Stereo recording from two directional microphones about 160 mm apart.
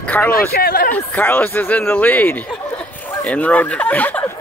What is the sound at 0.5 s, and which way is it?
Speech, 75° left (ahead or behind).